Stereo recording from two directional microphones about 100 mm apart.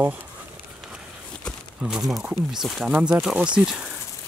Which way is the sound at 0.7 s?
5° right (ahead or behind).